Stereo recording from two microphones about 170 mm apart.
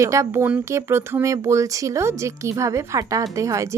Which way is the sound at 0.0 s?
15° right (ahead or behind).